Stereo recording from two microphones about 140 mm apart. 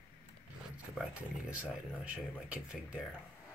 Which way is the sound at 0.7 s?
10° right (ahead or behind).